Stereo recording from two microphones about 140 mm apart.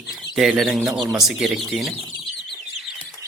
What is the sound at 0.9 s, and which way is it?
Speech, 25° right (ahead or behind).